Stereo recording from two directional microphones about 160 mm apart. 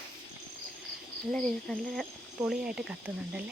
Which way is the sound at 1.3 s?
5° left (ahead or behind).